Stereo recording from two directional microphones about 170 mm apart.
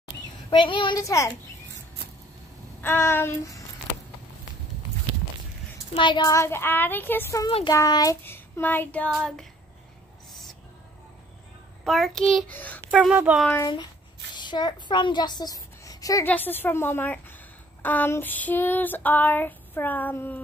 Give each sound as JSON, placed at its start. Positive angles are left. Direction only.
{"t": 0.5, "sound": "a woman's voice", "side_deg": 30}
{"t": 2.8, "sound": "female singing", "side_deg": 10}
{"t": 5.9, "sound": "female singing", "side_deg": 25}
{"t": 7.4, "sound": "female singing", "side_deg": 25}
{"t": 9.1, "sound": "a child's voice", "side_deg": 0}
{"t": 11.8, "sound": "a child's voice", "side_deg": 0}
{"t": 12.5, "sound": "female singing", "side_deg": 10}
{"t": 12.9, "sound": "speech", "side_deg": -5}
{"t": 14.3, "sound": "a child's voice", "side_deg": 25}
{"t": 16.3, "sound": "female singing", "side_deg": 10}